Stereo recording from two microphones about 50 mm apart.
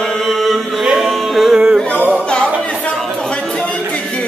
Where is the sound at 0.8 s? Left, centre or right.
Centre.